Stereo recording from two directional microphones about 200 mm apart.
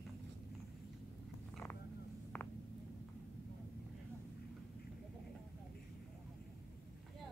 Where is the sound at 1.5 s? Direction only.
10° left (ahead or behind).